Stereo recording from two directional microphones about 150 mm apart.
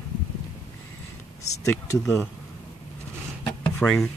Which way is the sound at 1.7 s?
20° left (ahead or behind).